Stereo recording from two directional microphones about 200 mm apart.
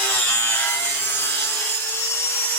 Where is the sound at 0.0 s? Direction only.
10° left (ahead or behind).